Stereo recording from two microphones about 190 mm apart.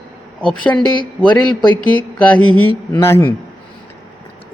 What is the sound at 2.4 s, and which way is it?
Mantra, 90° left.